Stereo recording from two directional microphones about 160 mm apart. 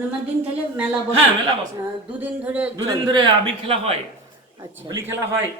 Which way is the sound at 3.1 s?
35° right (ahead or behind).